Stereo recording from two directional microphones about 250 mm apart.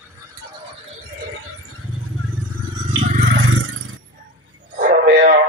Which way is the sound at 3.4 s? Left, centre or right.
Right.